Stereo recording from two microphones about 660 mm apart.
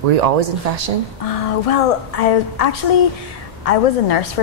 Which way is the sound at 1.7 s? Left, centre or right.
Left.